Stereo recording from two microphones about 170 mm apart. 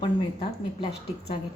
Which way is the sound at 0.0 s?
30° left (ahead or behind).